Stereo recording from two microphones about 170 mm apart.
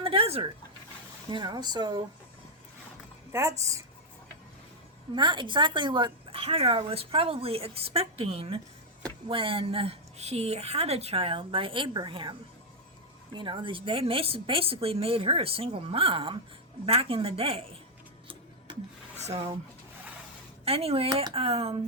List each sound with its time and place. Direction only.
0.0 s a sound: 35° right (ahead or behind)
1.3 s speech: 25° right (ahead or behind)
3.3 s speech: 15° right (ahead or behind)
5.1 s a woman's voice: 30° right (ahead or behind)
19.2 s a woman's voice: 35° right (ahead or behind)
20.7 s a woman's voice: 35° right (ahead or behind)